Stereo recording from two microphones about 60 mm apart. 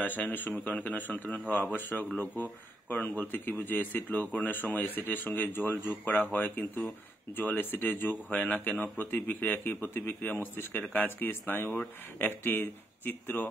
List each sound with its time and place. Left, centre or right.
0.0 s speech: left